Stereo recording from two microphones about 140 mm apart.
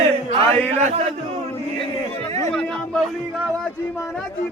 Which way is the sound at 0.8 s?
55° right (ahead or behind).